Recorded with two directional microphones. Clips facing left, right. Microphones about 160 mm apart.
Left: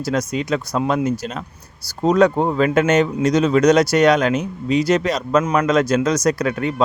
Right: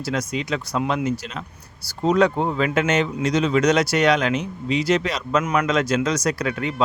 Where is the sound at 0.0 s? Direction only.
45° left (ahead or behind).